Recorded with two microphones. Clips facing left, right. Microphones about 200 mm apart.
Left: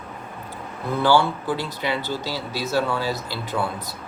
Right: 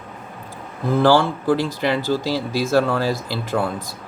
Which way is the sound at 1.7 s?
45° right (ahead or behind).